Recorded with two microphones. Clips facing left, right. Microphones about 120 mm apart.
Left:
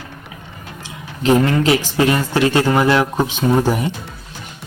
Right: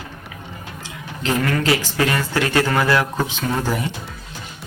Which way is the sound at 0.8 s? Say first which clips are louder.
Left 5 dB; 20° left (ahead or behind).